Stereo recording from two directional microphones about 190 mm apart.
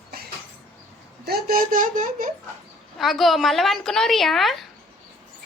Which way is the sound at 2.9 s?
Centre (ahead or behind).